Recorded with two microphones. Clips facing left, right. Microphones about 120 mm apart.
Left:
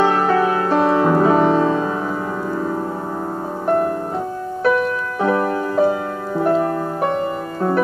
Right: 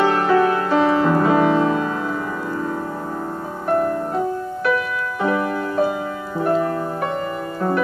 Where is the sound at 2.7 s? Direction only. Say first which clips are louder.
Left 2 dB; 25° left (ahead or behind).